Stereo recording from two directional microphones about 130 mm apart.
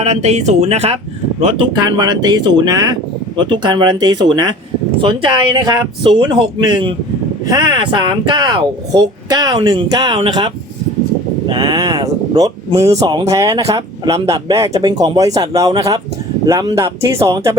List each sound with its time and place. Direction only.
0.0 s speech: 60° right (ahead or behind)
1.4 s speech: 45° right (ahead or behind); by 17.6 s 25° right (ahead or behind)